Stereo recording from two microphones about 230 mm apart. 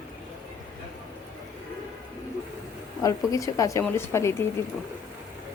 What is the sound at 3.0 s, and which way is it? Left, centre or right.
Speech, centre.